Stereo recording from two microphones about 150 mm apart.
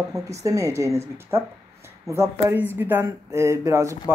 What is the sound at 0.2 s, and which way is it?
Speech, 20° right (ahead or behind).